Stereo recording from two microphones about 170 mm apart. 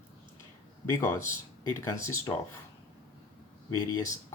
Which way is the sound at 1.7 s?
15° left (ahead or behind).